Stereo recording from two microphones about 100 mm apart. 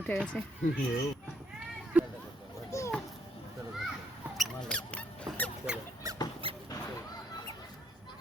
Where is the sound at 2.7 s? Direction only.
30° left (ahead or behind).